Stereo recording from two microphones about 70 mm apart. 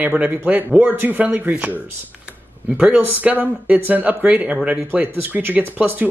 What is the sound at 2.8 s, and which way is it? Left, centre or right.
Speech, right.